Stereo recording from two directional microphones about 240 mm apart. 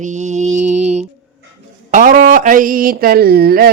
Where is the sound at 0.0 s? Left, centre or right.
Right.